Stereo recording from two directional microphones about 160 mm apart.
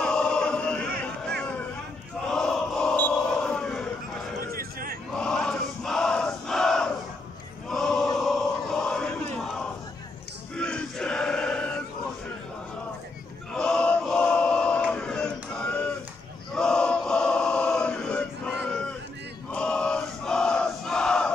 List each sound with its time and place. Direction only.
0.0 s chant: 5° left (ahead or behind)
1.2 s a sound: 5° left (ahead or behind)
2.2 s battle cry: 5° left (ahead or behind)
4.6 s a sound: 65° right (ahead or behind)
5.1 s crowd: 5° left (ahead or behind)
7.7 s chant: 5° left (ahead or behind)
8.2 s crowd: centre (ahead or behind)
10.5 s a sound: 5° left (ahead or behind)
13.6 s chant: 5° left (ahead or behind)
19.5 s crowd: 5° left (ahead or behind)